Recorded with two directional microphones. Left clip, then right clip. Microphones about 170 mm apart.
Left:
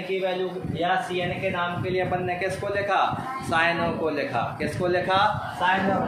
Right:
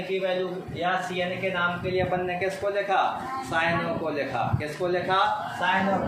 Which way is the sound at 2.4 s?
40° left (ahead or behind).